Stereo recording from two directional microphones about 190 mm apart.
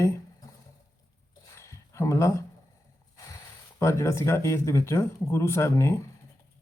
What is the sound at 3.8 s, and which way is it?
Speech, 15° left (ahead or behind).